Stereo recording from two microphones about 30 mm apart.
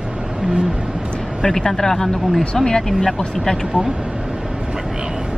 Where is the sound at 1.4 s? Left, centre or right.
Centre.